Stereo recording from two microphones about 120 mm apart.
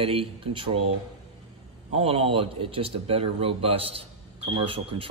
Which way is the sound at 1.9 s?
55° right (ahead or behind).